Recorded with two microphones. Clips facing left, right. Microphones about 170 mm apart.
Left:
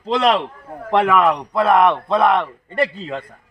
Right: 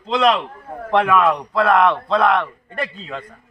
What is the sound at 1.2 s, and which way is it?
A man's voice, 20° left (ahead or behind).